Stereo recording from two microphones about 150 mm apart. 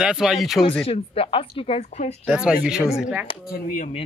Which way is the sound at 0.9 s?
40° left (ahead or behind).